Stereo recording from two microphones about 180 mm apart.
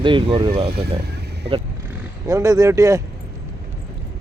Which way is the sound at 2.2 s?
20° right (ahead or behind).